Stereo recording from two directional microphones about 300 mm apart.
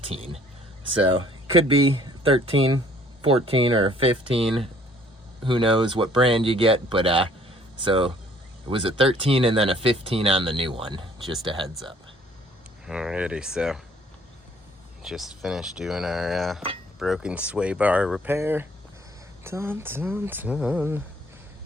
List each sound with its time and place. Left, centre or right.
0.0 s speech: centre
12.8 s speech: centre
15.0 s speech: centre